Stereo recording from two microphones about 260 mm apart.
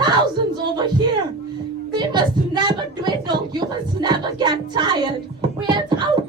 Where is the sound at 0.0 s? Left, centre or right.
Centre.